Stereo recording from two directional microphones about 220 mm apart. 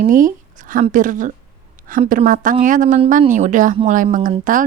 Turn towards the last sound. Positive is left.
turn(degrees=-35)  # may be behind; listen again after turning